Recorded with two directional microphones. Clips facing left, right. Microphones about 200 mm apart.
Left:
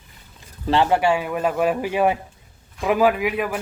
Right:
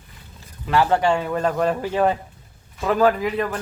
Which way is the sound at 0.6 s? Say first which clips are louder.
Left 1 dB; 25° left (ahead or behind).